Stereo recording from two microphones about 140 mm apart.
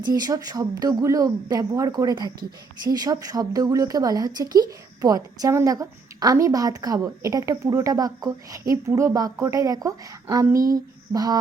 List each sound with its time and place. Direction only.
0.1 s a woman's voice: 25° right (ahead or behind)